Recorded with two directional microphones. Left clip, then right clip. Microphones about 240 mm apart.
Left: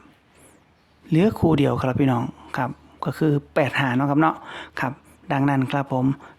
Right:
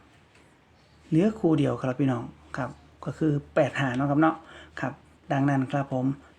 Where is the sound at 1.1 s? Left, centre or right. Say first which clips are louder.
Left 4 dB; left.